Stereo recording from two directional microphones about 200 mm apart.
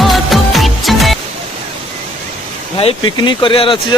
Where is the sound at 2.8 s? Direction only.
25° left (ahead or behind).